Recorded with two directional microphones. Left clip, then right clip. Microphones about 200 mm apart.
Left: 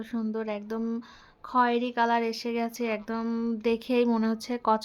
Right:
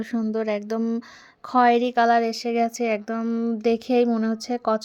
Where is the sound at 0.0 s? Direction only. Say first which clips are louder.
Right 7 dB; 30° right (ahead or behind).